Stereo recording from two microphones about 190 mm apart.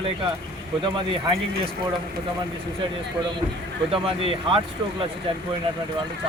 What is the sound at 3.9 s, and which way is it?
Speech, 30° right (ahead or behind).